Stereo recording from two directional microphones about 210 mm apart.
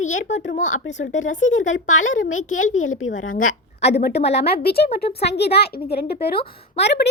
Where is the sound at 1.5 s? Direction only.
65° left (ahead or behind).